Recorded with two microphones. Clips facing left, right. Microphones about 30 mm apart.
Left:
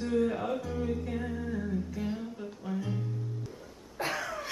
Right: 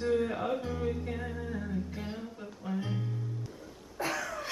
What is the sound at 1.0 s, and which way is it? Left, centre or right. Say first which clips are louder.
Humming: left 2 dB; centre.